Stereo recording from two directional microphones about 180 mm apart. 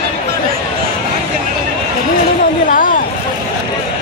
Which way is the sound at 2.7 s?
50° left (ahead or behind).